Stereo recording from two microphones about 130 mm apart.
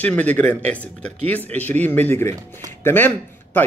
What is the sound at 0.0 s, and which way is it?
Speech, 10° left (ahead or behind).